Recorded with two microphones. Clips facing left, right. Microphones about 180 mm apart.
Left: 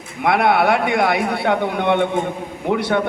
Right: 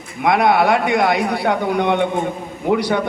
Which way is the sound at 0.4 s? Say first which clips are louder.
Right 1 dB; 65° left (ahead or behind).